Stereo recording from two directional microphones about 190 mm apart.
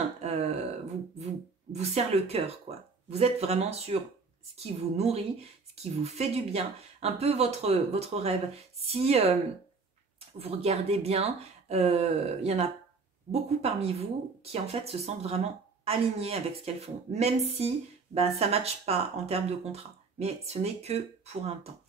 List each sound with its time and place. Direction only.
0.2 s a sound: 35° right (ahead or behind)
1.2 s speech: 35° right (ahead or behind)
10.4 s speech: 35° right (ahead or behind)